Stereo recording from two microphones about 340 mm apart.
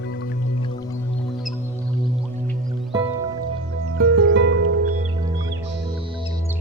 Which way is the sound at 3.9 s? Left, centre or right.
Right.